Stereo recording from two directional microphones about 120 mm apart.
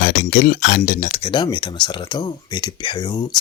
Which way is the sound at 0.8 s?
90° left.